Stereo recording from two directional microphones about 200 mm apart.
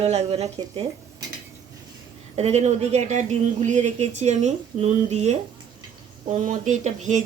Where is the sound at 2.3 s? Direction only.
35° right (ahead or behind).